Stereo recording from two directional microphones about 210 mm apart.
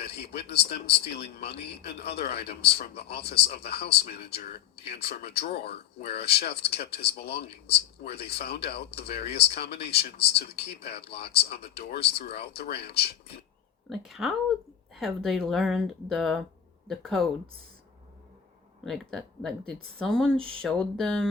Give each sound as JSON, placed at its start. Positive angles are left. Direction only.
{"t": 0.0, "sound": "speech", "side_deg": 50}
{"t": 13.9, "sound": "speech", "side_deg": 0}
{"t": 18.9, "sound": "speech", "side_deg": 0}